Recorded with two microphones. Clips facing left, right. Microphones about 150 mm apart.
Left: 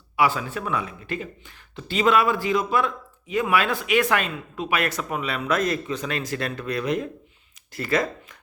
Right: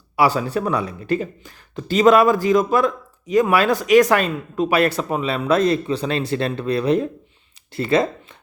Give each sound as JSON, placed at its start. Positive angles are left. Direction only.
{"t": 0.2, "sound": "speech", "side_deg": -35}